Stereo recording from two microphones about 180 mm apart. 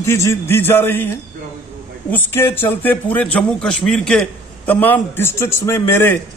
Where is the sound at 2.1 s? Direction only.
15° left (ahead or behind).